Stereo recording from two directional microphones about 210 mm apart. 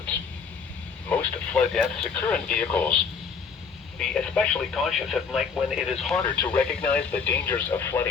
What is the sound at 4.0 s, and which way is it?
Speech, 5° left (ahead or behind).